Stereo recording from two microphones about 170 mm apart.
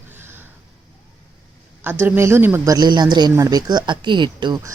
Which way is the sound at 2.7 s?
25° right (ahead or behind).